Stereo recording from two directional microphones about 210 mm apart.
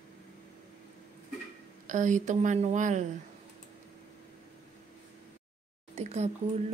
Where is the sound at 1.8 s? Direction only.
35° right (ahead or behind).